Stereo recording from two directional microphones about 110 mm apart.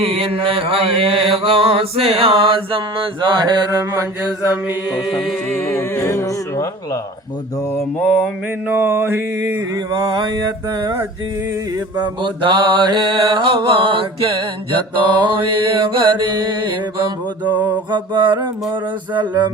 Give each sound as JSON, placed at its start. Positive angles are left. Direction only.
{"t": 0.0, "sound": "mantra", "side_deg": -60}
{"t": 4.9, "sound": "a capella", "side_deg": -5}
{"t": 5.6, "sound": "speech", "side_deg": 25}
{"t": 8.2, "sound": "mantra", "side_deg": -15}
{"t": 9.7, "sound": "mantra", "side_deg": -40}
{"t": 12.2, "sound": "mantra", "side_deg": -45}
{"t": 17.9, "sound": "mantra", "side_deg": -45}